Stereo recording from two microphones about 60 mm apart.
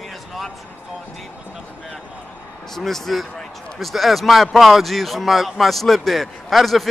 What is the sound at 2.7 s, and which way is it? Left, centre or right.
A man's voice, centre.